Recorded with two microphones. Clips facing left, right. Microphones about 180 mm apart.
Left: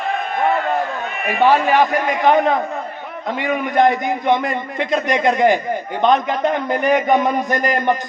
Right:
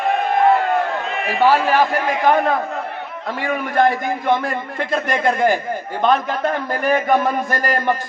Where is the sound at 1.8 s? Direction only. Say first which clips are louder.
Left 1 dB; 5° right (ahead or behind).